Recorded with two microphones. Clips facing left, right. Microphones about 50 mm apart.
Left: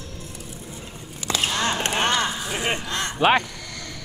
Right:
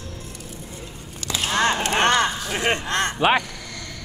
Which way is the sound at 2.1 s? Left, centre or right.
Centre.